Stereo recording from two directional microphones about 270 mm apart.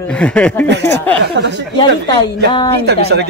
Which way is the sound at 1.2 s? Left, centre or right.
Right.